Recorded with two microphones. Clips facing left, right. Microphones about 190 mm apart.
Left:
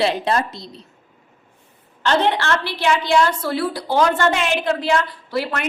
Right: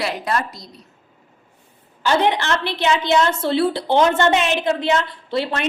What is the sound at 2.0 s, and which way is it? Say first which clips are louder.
A woman's voice: even; 10° right (ahead or behind).